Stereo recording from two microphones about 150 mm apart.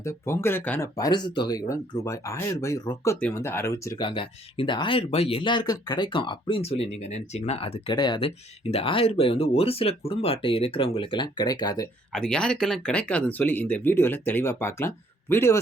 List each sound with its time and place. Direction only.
0.0 s speech: 20° left (ahead or behind)
0.9 s speech: 25° left (ahead or behind)
4.0 s speech: 35° left (ahead or behind)
7.9 s speech: 30° left (ahead or behind)
12.1 s speech: 5° left (ahead or behind)